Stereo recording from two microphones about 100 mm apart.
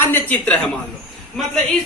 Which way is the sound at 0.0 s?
20° left (ahead or behind).